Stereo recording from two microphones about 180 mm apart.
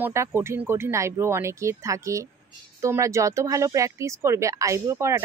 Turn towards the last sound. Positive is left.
turn(degrees=-15)  # may be behind; listen again after turning